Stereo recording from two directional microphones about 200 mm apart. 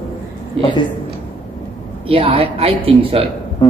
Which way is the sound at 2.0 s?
30° right (ahead or behind).